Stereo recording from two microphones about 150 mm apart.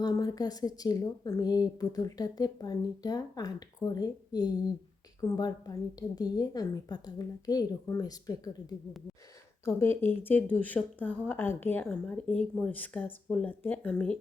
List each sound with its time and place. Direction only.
0.0 s a woman's voice: 25° left (ahead or behind)
9.6 s speech: 15° left (ahead or behind)